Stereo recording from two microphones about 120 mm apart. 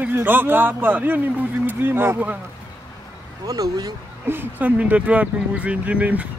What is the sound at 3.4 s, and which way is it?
Speech, 30° right (ahead or behind).